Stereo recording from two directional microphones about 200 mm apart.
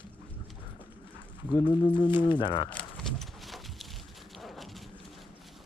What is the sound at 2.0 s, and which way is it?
Speech, 25° left (ahead or behind).